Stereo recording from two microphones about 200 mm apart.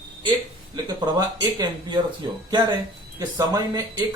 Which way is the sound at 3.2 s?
20° right (ahead or behind).